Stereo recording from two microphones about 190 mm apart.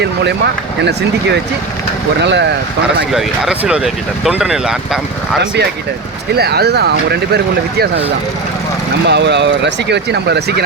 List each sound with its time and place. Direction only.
0.0 s speech: 60° right (ahead or behind)
2.2 s speech: 65° right (ahead or behind)
3.0 s speech: centre (ahead or behind)
6.3 s speech: 55° right (ahead or behind)
9.0 s speech: 65° right (ahead or behind)